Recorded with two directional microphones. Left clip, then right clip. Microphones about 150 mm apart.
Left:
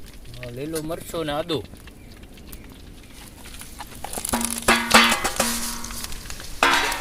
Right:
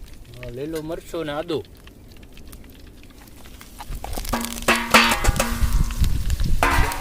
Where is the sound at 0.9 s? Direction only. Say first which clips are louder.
Left 1 dB; 90° right.